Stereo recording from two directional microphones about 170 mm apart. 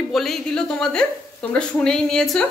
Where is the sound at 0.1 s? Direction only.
Centre (ahead or behind).